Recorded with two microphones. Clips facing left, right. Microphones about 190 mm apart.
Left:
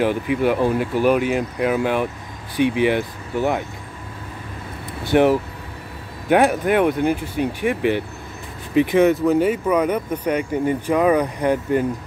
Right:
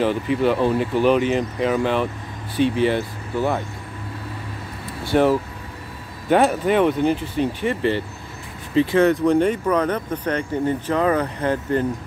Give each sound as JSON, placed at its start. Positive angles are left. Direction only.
{"t": 0.0, "sound": "speech", "side_deg": 10}
{"t": 5.0, "sound": "speech", "side_deg": 15}
{"t": 9.1, "sound": "speech", "side_deg": 5}